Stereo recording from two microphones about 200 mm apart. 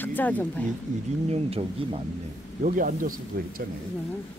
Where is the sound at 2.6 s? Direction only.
40° right (ahead or behind).